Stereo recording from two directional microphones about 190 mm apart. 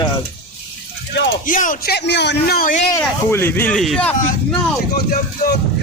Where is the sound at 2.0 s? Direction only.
65° left (ahead or behind); by 2.8 s 45° left (ahead or behind).